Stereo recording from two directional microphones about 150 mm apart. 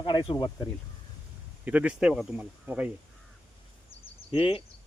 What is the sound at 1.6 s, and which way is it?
Speech, 10° right (ahead or behind).